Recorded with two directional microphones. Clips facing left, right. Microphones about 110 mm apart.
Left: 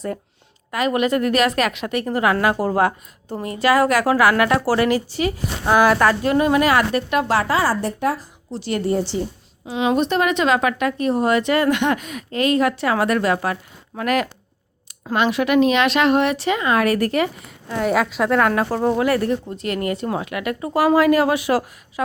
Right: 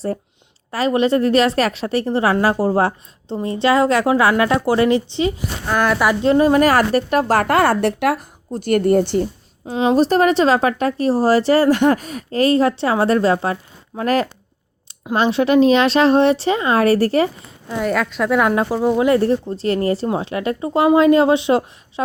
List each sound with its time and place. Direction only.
0.7 s a woman's voice: 30° right (ahead or behind)
5.7 s speech: 5° left (ahead or behind)
6.2 s speech: 30° right (ahead or behind); by 8.3 s 70° right (ahead or behind)
8.4 s speech: 50° right (ahead or behind)
9.6 s a woman's voice: 35° right (ahead or behind)
17.7 s a woman's voice: 5° left (ahead or behind)
18.3 s speech: 15° right (ahead or behind)
18.9 s speech: 20° right (ahead or behind)